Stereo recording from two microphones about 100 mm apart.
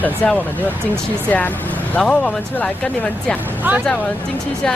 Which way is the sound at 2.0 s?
10° left (ahead or behind).